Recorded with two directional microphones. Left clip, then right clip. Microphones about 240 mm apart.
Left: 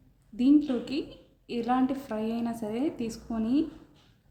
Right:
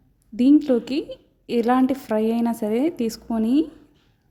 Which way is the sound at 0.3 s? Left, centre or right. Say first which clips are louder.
Right 7 dB; right.